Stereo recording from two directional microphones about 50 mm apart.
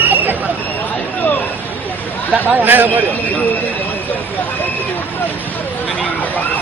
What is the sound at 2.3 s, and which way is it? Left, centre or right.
Speech, right.